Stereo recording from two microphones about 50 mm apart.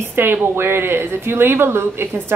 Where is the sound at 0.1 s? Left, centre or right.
Right.